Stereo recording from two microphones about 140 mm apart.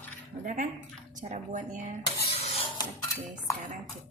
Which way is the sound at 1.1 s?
65° right (ahead or behind).